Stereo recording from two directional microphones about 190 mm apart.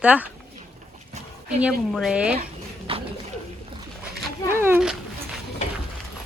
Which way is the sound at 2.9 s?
30° right (ahead or behind).